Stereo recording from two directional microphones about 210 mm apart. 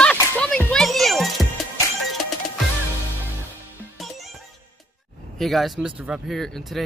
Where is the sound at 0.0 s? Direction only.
5° left (ahead or behind).